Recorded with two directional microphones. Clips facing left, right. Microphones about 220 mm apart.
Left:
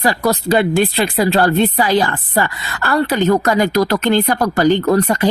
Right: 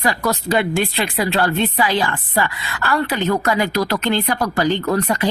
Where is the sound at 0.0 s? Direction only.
35° left (ahead or behind).